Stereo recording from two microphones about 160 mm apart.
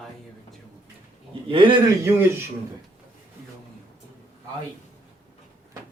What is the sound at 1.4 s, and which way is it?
Speech, 30° right (ahead or behind).